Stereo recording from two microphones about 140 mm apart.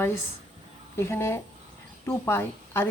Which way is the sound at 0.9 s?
20° left (ahead or behind).